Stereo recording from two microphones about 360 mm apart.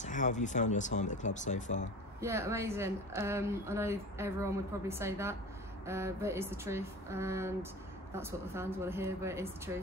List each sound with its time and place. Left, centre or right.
0.0 s speech: centre
2.1 s speech: centre